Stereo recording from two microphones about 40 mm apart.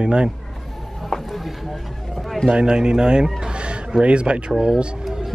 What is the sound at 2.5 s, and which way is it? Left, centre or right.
Speech, centre.